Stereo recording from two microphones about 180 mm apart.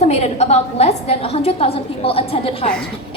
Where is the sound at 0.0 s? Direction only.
35° left (ahead or behind).